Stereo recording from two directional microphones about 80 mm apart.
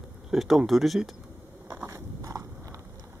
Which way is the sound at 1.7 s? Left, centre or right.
Right.